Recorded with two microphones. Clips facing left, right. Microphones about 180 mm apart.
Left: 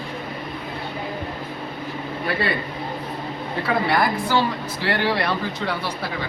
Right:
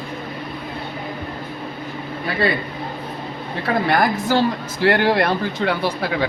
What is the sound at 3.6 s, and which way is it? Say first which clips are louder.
A woman's voice: right 3 dB; 45° right (ahead or behind).